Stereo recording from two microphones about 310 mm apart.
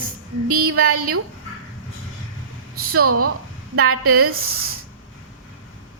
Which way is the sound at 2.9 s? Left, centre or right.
Right.